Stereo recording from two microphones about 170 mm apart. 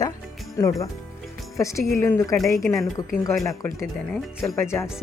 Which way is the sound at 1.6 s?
15° left (ahead or behind).